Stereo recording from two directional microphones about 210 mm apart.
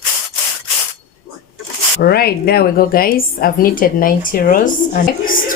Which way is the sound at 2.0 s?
45° left (ahead or behind).